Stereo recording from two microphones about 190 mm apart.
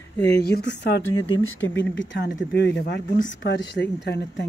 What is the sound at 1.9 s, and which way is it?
Speech, 70° left (ahead or behind).